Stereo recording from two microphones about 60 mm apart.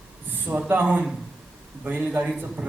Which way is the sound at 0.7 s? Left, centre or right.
Right.